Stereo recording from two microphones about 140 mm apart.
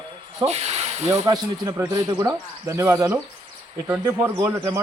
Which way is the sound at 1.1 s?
25° right (ahead or behind).